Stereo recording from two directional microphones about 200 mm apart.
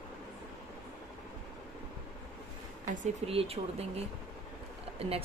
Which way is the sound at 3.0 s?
30° right (ahead or behind).